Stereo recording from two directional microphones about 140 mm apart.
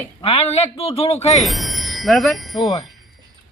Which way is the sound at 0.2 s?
45° left (ahead or behind).